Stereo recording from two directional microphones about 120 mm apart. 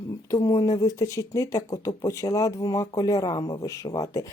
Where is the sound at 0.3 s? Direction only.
30° left (ahead or behind).